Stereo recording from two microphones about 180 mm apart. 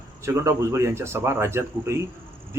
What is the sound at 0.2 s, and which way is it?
Speech, 15° right (ahead or behind).